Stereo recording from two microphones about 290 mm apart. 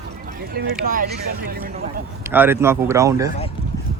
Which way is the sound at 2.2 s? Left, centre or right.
Centre.